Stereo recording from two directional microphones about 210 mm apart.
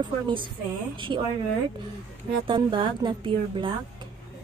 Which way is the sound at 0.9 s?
25° right (ahead or behind).